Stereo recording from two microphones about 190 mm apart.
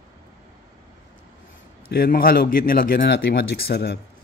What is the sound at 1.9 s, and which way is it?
Speech, 50° left (ahead or behind).